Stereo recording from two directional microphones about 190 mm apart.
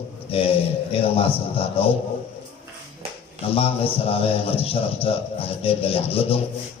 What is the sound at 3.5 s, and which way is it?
A man's voice, 30° left (ahead or behind).